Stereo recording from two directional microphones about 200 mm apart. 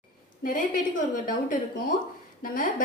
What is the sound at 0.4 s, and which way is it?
A woman's voice, 45° left (ahead or behind).